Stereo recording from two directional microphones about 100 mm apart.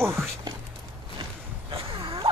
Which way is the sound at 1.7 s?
60° right (ahead or behind).